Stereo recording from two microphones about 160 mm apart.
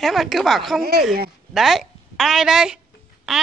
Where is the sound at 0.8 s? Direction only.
70° right (ahead or behind).